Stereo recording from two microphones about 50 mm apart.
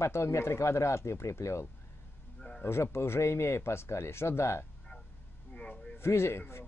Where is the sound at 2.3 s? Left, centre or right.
Centre.